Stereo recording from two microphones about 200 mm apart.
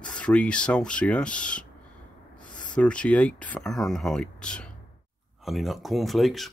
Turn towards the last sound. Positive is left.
turn(degrees=0)  # may be behind; listen again after turning